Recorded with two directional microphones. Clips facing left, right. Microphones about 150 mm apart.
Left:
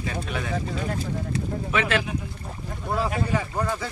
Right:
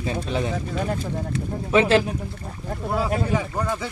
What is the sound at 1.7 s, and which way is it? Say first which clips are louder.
Speech: right 8 dB; 30° right (ahead or behind).